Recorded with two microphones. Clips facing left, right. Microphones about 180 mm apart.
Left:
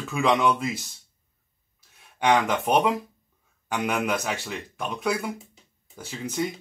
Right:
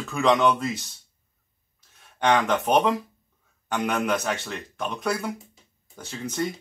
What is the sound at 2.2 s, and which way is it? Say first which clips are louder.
A man's voice: even; 10° left (ahead or behind).